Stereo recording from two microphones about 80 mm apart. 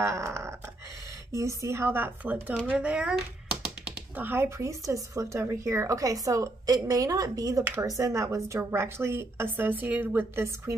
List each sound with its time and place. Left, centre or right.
0.0 s a sound: right
1.3 s a woman's voice: right; by 3.2 s centre
4.2 s a woman's voice: right
10.4 s a woman's voice: right